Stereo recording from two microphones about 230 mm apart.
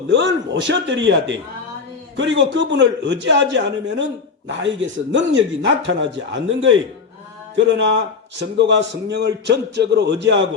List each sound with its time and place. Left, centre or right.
0.1 s a man's voice: right